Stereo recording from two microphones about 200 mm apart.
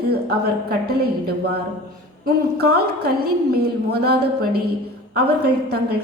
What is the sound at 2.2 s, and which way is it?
Speech, 55° right (ahead or behind).